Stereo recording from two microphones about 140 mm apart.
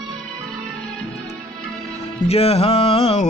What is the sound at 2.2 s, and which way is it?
Music, 45° left (ahead or behind).